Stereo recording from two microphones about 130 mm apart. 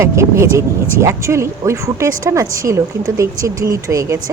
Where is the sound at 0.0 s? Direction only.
20° right (ahead or behind).